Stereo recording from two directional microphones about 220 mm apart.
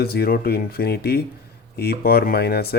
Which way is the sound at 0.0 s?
45° left (ahead or behind).